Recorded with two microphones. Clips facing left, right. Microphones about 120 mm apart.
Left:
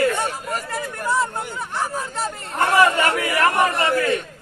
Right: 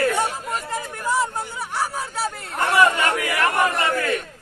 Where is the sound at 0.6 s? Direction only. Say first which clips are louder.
Left 1 dB; 15° right (ahead or behind).